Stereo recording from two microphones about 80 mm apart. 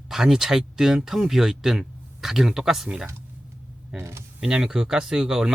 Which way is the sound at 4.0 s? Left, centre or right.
Right.